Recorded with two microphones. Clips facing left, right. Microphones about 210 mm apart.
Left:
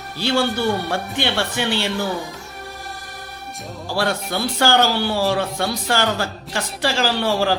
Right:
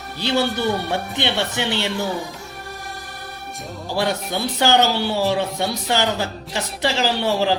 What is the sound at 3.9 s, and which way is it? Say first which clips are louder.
A man's voice: even; 20° right (ahead or behind).